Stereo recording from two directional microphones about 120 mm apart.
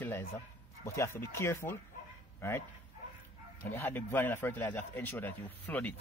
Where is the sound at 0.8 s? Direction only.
20° left (ahead or behind).